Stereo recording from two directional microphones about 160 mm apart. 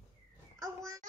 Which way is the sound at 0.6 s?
20° right (ahead or behind).